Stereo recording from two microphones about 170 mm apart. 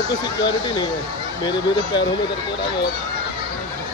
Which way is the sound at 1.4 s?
25° left (ahead or behind).